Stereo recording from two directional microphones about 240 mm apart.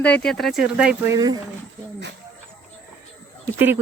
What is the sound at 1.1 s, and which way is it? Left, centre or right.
Speech, centre.